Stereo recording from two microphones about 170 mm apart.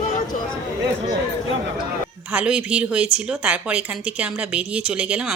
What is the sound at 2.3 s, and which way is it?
Speech, 5° right (ahead or behind).